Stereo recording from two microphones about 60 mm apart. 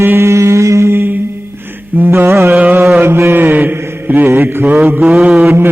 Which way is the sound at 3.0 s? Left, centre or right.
Right.